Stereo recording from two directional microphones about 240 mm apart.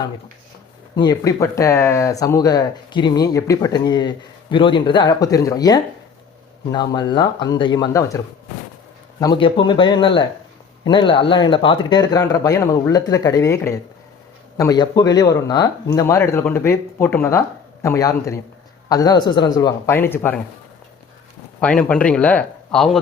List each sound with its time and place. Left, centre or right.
0.9 s speech: centre
9.2 s speech: centre
21.6 s speech: centre